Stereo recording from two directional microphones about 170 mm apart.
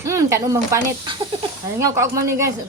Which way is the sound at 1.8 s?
20° right (ahead or behind).